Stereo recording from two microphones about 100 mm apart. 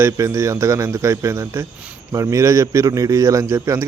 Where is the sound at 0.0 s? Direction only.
30° right (ahead or behind).